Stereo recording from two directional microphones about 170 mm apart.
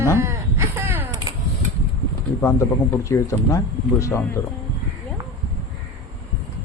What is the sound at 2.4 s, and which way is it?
Speech, 15° left (ahead or behind).